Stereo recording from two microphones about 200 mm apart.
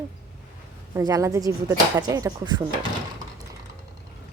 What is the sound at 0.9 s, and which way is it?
Speech, 15° right (ahead or behind).